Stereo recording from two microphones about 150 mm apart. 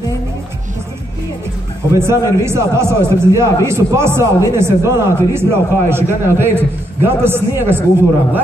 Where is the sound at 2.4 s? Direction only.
15° right (ahead or behind).